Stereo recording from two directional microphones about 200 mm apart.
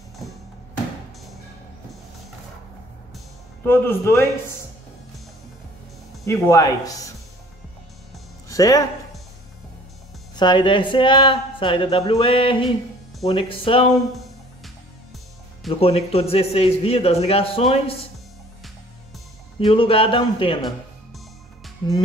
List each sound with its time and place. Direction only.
3.6 s speech: 10° left (ahead or behind)
6.2 s speech: 15° left (ahead or behind)
8.5 s speech: 15° left (ahead or behind)
10.3 s speech: 20° left (ahead or behind)
15.8 s a man's voice: 30° left (ahead or behind)
19.6 s speech: 25° left (ahead or behind)